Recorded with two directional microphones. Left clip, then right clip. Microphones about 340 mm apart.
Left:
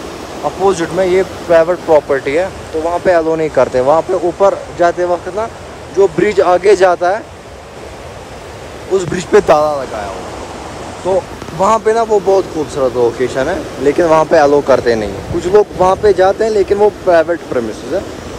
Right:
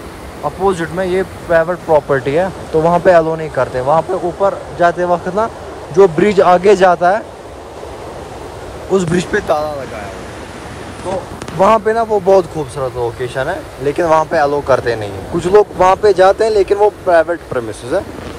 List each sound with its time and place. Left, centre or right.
0.7 s speech: centre
8.9 s speech: centre
11.6 s speech: centre